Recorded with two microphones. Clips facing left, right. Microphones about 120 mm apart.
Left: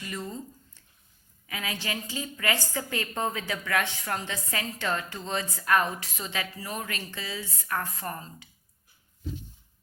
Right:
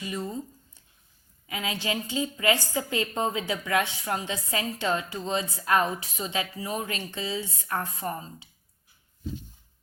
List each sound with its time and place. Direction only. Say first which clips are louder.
0.0 s a woman's voice: right 3 dB; 15° right (ahead or behind)